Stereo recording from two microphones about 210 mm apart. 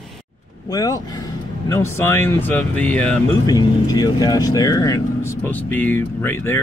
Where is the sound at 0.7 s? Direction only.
15° left (ahead or behind).